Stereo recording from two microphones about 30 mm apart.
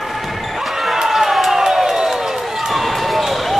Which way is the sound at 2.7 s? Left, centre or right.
Centre.